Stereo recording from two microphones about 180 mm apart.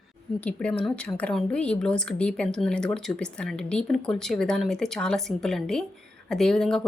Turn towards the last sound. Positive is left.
turn(degrees=5)  # may be behind; listen again after turning